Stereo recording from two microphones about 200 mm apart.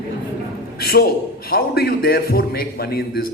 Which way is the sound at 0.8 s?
50° left (ahead or behind).